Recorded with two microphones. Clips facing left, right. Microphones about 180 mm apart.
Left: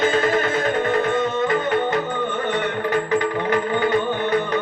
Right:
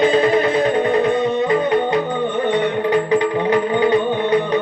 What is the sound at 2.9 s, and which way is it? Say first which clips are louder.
Music: right 4 dB; 15° right (ahead or behind).